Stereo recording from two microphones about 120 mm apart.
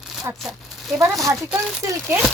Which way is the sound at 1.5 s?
Centre (ahead or behind).